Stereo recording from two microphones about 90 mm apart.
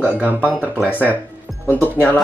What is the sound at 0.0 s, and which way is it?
Speech, 20° right (ahead or behind).